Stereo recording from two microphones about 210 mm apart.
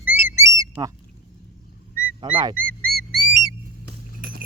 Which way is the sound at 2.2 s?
20° right (ahead or behind).